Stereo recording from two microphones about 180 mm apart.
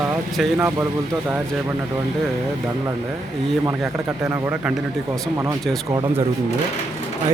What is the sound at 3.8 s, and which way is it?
Speech, 5° right (ahead or behind).